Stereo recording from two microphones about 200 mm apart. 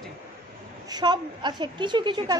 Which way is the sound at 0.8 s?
20° right (ahead or behind).